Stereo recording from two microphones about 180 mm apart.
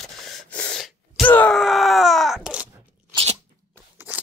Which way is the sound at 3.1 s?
35° right (ahead or behind).